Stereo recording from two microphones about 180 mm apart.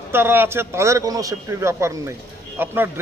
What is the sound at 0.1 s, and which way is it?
A man's voice, 10° right (ahead or behind).